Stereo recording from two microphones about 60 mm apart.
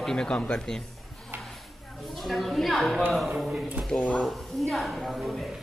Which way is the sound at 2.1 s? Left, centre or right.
Centre.